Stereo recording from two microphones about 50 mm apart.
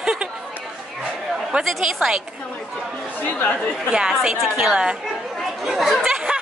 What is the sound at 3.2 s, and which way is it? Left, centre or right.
Speech, left.